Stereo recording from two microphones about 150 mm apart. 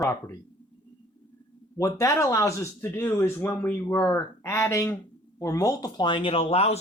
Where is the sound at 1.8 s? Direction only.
20° left (ahead or behind).